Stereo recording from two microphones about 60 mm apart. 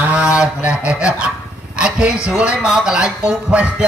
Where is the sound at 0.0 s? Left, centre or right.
Centre.